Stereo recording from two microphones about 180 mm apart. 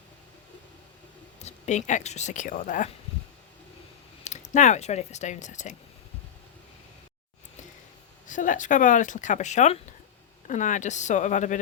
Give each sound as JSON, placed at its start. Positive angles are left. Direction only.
{"t": 1.4, "sound": "speech", "side_deg": 40}
{"t": 4.2, "sound": "speech", "side_deg": 40}
{"t": 8.3, "sound": "speech", "side_deg": 45}